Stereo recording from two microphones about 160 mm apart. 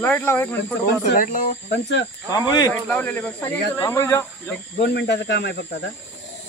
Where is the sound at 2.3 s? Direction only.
25° left (ahead or behind).